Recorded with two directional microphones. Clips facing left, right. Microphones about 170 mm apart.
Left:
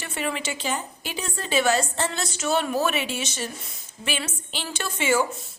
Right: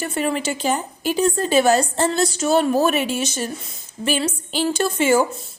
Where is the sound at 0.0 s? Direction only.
40° right (ahead or behind).